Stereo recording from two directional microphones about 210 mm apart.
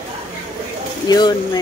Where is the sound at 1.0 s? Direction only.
20° left (ahead or behind).